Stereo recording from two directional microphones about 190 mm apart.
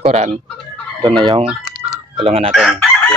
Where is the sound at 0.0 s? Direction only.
35° right (ahead or behind).